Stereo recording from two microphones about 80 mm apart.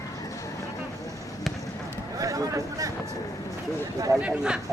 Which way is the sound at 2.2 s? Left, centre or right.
Right.